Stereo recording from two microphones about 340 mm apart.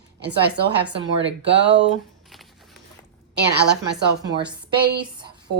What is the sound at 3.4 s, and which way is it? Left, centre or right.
Speech, right.